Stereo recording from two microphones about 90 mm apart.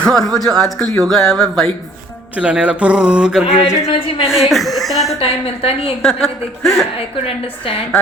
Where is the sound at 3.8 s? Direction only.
90° left.